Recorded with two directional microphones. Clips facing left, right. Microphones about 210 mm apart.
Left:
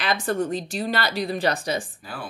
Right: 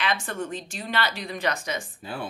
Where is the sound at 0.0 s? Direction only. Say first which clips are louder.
Left 5 dB; 40° left (ahead or behind).